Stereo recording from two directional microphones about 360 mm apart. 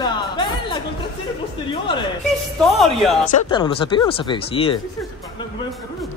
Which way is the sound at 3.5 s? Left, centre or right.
Centre.